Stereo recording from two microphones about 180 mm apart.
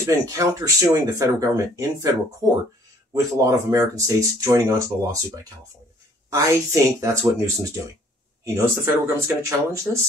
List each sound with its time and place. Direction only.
0.0 s speech: 15° right (ahead or behind)